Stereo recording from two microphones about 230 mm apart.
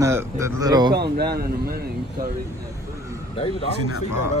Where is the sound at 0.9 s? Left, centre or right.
Right.